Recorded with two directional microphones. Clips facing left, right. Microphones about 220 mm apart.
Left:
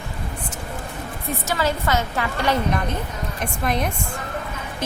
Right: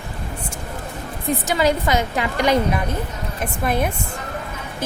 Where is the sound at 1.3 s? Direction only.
15° right (ahead or behind).